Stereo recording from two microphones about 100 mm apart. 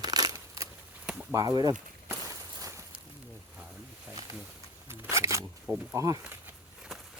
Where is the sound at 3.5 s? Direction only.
10° right (ahead or behind).